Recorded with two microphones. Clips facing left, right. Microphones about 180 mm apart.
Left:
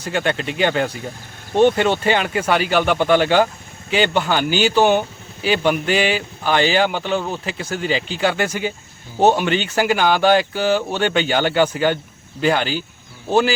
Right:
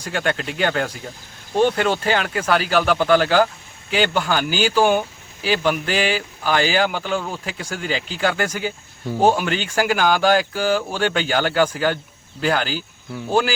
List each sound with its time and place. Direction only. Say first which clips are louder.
0.0 s speech: left 2 dB; 5° left (ahead or behind)